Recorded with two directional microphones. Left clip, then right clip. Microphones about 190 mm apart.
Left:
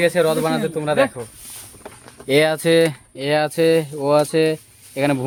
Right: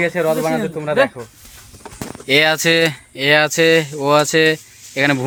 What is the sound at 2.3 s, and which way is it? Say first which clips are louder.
Speech: right 2 dB; 5° left (ahead or behind).